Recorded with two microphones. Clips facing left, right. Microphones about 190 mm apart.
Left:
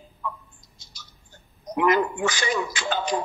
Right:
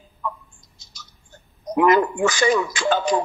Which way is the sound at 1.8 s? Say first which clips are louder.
Right 4 dB; 45° right (ahead or behind).